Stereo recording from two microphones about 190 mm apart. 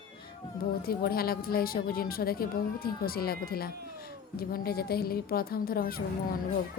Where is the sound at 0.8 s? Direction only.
50° left (ahead or behind).